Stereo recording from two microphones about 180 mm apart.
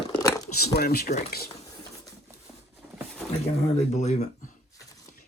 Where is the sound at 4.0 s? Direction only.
40° left (ahead or behind).